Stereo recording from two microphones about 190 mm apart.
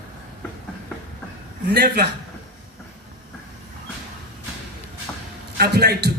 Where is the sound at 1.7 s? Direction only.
60° right (ahead or behind).